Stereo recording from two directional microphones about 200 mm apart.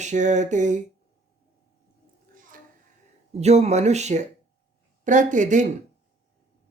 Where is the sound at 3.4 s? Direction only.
35° right (ahead or behind).